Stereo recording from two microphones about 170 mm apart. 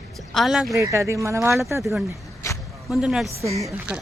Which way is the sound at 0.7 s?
20° right (ahead or behind).